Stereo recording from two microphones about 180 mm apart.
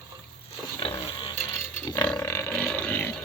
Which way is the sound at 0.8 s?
25° left (ahead or behind).